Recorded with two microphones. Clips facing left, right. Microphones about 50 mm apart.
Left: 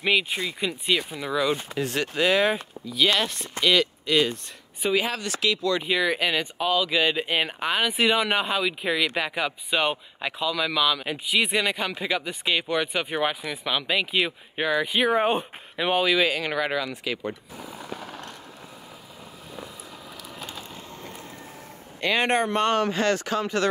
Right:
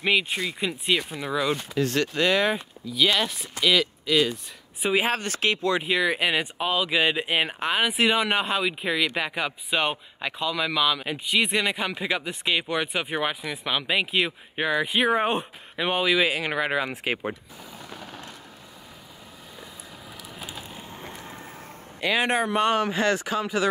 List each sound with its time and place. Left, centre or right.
0.0 s speech: centre
1.8 s speech: centre
5.0 s speech: right
5.9 s speech: centre
16.8 s speech: right
17.6 s mechanisms: centre
20.3 s a sound: centre
22.0 s speech: centre